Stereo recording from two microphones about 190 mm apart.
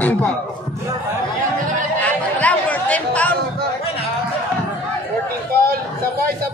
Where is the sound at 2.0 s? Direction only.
5° left (ahead or behind).